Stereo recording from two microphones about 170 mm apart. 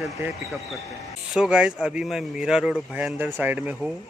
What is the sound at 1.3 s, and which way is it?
A man's voice, 5° right (ahead or behind).